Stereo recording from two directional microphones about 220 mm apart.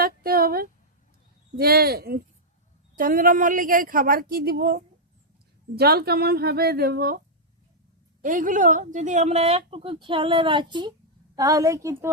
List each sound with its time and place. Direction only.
0.0 s a woman's voice: 40° right (ahead or behind)
8.2 s a woman's voice: 35° right (ahead or behind); by 12.1 s 15° right (ahead or behind)